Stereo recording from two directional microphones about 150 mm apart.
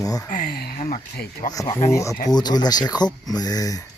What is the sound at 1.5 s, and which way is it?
Speech, 25° left (ahead or behind).